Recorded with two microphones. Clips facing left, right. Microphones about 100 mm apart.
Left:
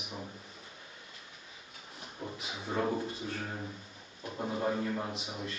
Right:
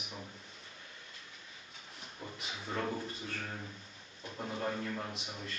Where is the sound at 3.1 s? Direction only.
5° left (ahead or behind).